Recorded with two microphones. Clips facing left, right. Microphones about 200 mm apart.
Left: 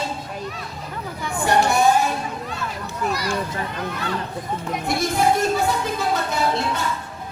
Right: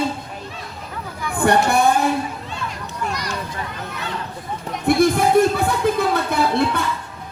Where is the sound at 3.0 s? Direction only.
5° left (ahead or behind).